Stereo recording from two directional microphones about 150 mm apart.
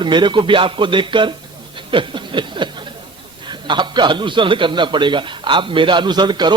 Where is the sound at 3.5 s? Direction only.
30° right (ahead or behind).